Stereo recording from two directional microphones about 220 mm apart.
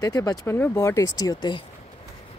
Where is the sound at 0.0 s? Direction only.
15° left (ahead or behind).